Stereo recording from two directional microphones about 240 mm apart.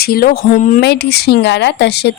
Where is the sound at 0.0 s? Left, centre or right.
Left.